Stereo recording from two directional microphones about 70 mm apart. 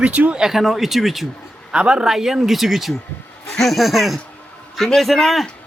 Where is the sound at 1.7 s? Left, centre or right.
Centre.